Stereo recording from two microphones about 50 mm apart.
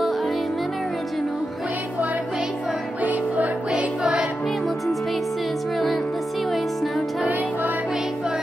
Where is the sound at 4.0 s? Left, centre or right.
Centre.